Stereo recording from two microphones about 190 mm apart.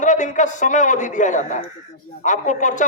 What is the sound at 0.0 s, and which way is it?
Speech, 40° left (ahead or behind).